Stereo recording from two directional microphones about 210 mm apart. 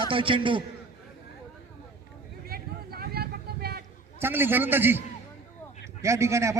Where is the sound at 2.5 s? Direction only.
45° right (ahead or behind).